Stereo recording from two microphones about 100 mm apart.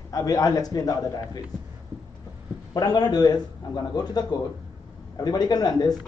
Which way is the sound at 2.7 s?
45° left (ahead or behind).